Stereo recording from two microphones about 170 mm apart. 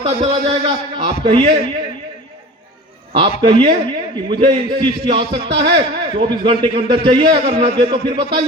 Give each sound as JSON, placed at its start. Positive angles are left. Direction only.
{"t": 0.0, "sound": "a man's voice", "side_deg": -35}
{"t": 3.1, "sound": "a man's voice", "side_deg": -30}